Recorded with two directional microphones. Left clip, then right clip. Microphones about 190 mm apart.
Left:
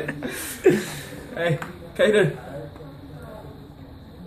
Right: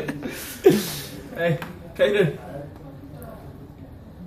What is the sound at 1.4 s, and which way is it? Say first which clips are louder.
Speech: right 1 dB; 45° left (ahead or behind).